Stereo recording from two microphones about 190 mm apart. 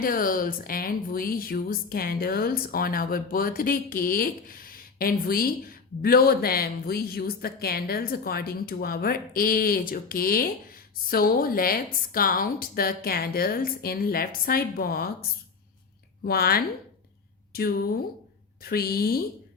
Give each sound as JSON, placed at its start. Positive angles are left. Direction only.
{"t": 0.0, "sound": "a woman's voice", "side_deg": 45}
{"t": 16.2, "sound": "a woman's voice", "side_deg": 55}